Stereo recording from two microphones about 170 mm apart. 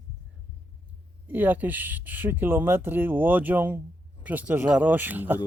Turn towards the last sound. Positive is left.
turn(degrees=-10)  # may be behind; listen again after turning